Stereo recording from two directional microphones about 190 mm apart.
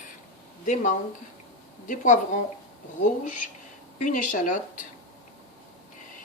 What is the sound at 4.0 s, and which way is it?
Speech, 40° left (ahead or behind).